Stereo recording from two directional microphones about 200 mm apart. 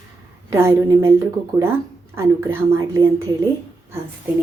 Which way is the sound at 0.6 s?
10° right (ahead or behind).